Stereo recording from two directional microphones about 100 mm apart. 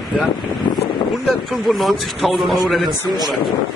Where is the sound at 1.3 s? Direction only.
Centre (ahead or behind).